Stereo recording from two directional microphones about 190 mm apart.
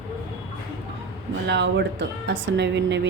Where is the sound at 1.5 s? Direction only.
65° right (ahead or behind).